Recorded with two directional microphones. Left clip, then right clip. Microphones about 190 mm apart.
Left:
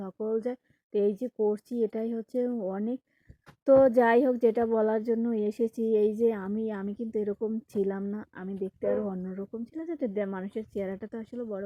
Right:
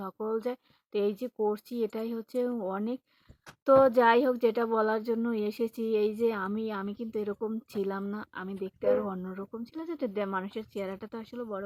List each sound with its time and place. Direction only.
0.0 s speech: 5° left (ahead or behind)
2.5 s speech: centre (ahead or behind)